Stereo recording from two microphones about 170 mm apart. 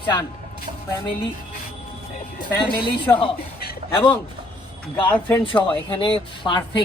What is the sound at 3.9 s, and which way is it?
A man's voice, 10° left (ahead or behind).